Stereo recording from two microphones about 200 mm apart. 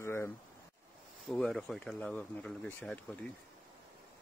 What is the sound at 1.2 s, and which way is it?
Speech, centre (ahead or behind).